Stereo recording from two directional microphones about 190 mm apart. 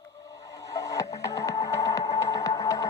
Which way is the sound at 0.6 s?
15° left (ahead or behind).